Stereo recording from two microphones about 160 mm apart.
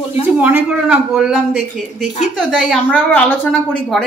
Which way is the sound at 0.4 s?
5° right (ahead or behind).